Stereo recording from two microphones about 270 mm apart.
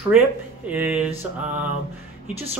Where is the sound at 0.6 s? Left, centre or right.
Centre.